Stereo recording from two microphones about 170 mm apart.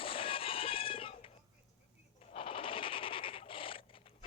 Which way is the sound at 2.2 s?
30° left (ahead or behind).